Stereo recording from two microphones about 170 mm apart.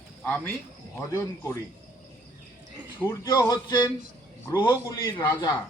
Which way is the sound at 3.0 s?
20° left (ahead or behind).